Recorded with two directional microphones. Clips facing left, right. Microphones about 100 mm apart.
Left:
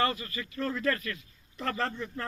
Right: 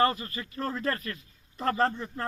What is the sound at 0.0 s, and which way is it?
Speech, 40° right (ahead or behind).